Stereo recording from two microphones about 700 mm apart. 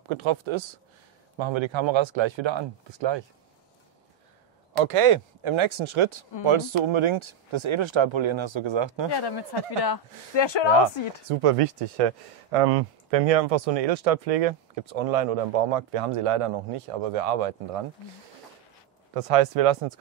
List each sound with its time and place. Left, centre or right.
0.1 s speech: right
4.7 s speech: right
9.1 s speech: left
11.2 s speech: right
19.1 s speech: right